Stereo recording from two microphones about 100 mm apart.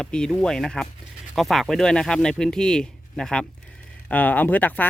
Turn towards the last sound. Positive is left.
turn(degrees=20)  # may be behind; listen again after turning